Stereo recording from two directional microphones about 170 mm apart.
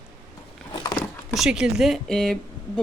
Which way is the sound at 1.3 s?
5° right (ahead or behind).